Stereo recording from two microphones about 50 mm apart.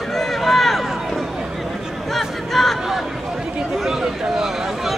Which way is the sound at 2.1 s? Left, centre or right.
Centre.